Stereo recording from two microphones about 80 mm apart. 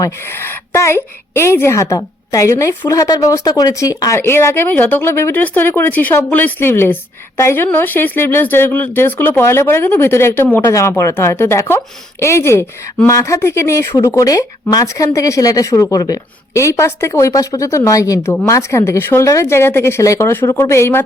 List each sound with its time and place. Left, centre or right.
0.2 s a woman's voice: left
4.2 s a woman's voice: left
10.7 s a woman's voice: left
16.6 s a woman's voice: left